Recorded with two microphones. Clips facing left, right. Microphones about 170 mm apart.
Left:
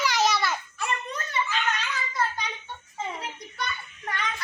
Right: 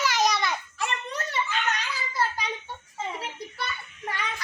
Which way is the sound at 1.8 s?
30° right (ahead or behind).